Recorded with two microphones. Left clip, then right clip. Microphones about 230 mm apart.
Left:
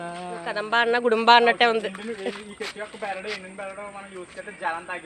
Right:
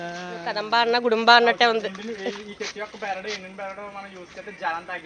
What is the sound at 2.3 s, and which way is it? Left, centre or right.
Speech, left.